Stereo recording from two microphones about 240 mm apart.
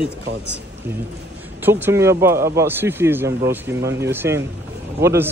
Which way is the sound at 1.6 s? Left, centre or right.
Centre.